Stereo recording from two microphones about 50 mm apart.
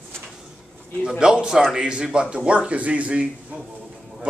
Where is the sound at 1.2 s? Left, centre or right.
Centre.